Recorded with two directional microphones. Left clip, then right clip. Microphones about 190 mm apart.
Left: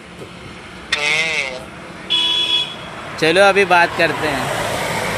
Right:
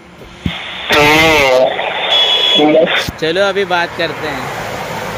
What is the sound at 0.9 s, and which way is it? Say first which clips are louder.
Radio: right 9 dB; 60° right (ahead or behind).